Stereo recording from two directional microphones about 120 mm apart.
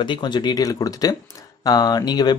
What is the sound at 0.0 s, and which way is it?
Speech, 40° left (ahead or behind).